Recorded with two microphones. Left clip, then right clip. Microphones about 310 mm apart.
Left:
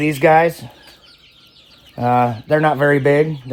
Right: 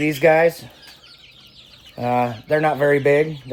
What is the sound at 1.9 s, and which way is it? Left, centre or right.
Speech, left.